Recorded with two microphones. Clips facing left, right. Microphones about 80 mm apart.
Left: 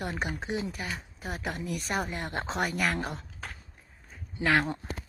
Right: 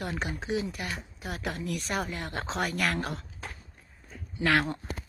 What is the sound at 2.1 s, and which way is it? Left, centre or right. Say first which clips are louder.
Speech: left 1 dB; left.